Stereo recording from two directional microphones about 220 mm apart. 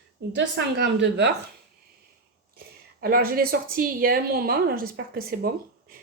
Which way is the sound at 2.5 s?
45° right (ahead or behind).